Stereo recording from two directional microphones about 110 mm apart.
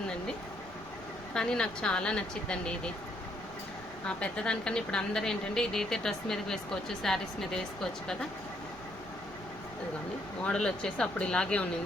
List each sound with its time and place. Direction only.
1.3 s speech: 5° left (ahead or behind)
4.0 s a woman's voice: 10° left (ahead or behind)
10.4 s speech: 5° left (ahead or behind)